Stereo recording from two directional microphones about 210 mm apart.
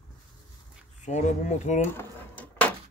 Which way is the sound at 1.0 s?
35° left (ahead or behind).